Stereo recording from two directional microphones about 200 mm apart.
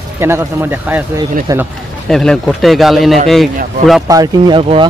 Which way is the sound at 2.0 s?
Centre (ahead or behind).